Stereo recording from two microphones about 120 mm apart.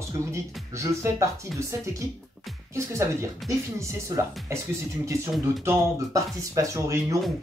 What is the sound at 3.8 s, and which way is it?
Speech, 25° right (ahead or behind).